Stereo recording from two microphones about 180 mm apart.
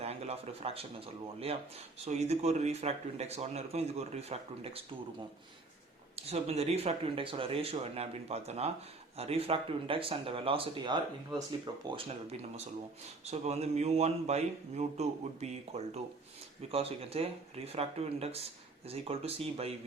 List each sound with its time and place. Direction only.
0.0 s speech: 35° right (ahead or behind)
6.1 s speech: 35° right (ahead or behind)